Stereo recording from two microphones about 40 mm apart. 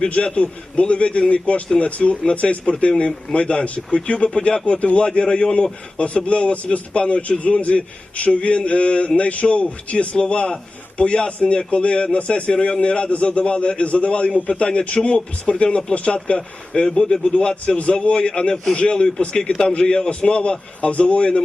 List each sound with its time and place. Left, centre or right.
0.1 s a man's voice: left